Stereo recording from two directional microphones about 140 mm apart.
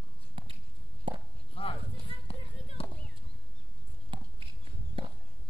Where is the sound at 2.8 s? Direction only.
40° left (ahead or behind).